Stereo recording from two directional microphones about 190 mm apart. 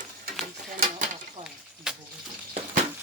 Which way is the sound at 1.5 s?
5° right (ahead or behind).